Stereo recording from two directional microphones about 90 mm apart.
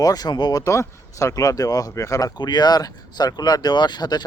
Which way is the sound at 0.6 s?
35° left (ahead or behind).